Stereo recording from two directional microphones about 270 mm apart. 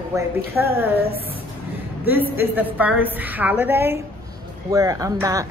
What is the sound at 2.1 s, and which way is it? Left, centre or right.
A woman's voice, centre.